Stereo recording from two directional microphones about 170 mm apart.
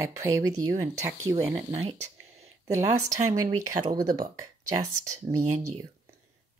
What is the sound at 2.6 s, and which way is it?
Speech, 20° right (ahead or behind).